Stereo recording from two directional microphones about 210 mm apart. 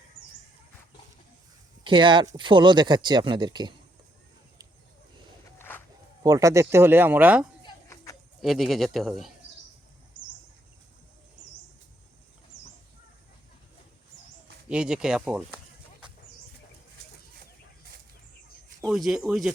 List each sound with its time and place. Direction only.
1.8 s speech: 20° right (ahead or behind)
5.5 s music: 10° left (ahead or behind)
6.2 s speech: 15° right (ahead or behind)
7.6 s a sound: 15° left (ahead or behind)
8.4 s speech: centre (ahead or behind)
14.7 s a sound: 5° right (ahead or behind)
18.8 s speech: centre (ahead or behind)